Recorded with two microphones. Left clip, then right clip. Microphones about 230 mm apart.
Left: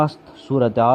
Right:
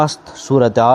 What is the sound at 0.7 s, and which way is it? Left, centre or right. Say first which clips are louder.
Speech: right 3 dB; right.